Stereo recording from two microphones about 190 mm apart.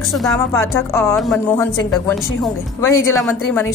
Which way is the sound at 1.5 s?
15° left (ahead or behind).